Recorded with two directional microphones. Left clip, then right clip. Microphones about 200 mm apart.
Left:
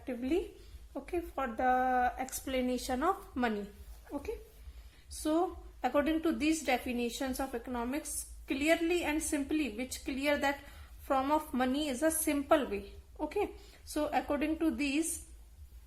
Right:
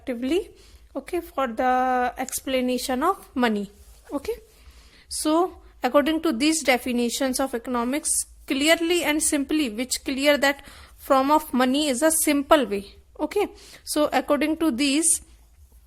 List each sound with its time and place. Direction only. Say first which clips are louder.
0.0 s a woman's voice: right 9 dB; 45° right (ahead or behind)